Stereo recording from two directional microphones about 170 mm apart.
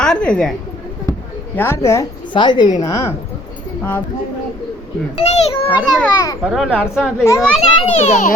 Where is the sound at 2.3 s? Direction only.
25° left (ahead or behind).